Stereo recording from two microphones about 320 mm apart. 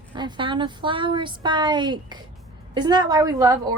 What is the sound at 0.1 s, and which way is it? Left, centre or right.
A woman's voice, centre.